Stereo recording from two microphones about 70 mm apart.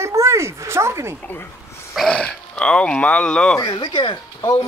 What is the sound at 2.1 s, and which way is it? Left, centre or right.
Speech, centre.